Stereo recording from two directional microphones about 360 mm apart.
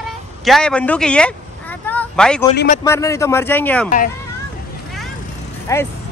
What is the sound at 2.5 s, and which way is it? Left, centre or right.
Speech, left.